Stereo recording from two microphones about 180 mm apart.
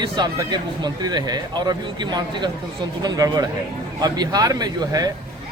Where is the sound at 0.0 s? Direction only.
25° right (ahead or behind).